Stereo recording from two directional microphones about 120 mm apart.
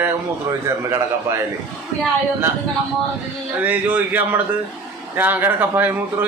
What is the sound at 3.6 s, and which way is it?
Speech, 15° right (ahead or behind).